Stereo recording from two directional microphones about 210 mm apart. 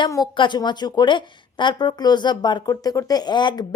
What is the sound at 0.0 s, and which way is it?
A woman's voice, 20° left (ahead or behind).